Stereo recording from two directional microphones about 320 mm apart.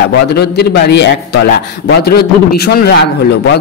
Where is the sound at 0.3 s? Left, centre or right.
Left.